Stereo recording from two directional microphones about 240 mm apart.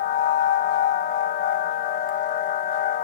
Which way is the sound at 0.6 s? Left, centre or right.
Left.